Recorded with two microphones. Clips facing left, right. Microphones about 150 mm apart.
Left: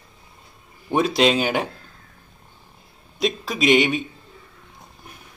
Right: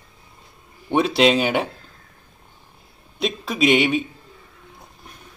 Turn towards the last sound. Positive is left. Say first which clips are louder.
# even
turn(degrees=0)  # may be behind; listen again after turning